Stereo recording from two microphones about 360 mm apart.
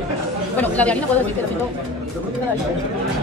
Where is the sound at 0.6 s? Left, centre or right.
Centre.